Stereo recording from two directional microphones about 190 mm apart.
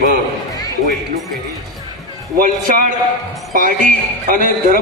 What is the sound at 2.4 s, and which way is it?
A man's voice, 45° right (ahead or behind).